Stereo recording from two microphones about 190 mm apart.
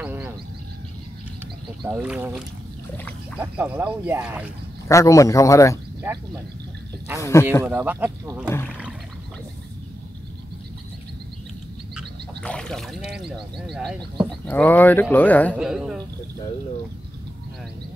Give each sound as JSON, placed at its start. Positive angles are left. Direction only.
{"t": 0.0, "sound": "a sound", "side_deg": -10}
{"t": 1.9, "sound": "speech", "side_deg": -5}
{"t": 4.8, "sound": "speech", "side_deg": 15}
{"t": 6.0, "sound": "speech", "side_deg": -10}
{"t": 7.2, "sound": "speech", "side_deg": 15}
{"t": 7.6, "sound": "speech", "side_deg": -10}
{"t": 11.9, "sound": "frog", "side_deg": 0}
{"t": 13.6, "sound": "speech", "side_deg": 0}
{"t": 15.5, "sound": "speech", "side_deg": -5}